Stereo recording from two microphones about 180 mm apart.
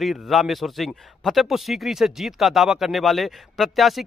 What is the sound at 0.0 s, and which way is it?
A man's voice, centre (ahead or behind).